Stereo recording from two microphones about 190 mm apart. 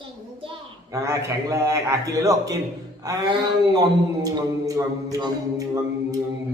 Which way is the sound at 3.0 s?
25° right (ahead or behind).